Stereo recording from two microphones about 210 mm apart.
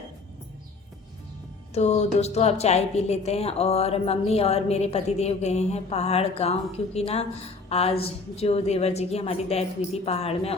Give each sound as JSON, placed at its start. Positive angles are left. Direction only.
{"t": 1.7, "sound": "a woman's voice", "side_deg": 30}